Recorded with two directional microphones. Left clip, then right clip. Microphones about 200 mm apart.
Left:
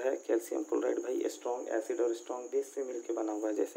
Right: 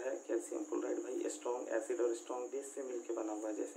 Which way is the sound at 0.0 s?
45° left (ahead or behind).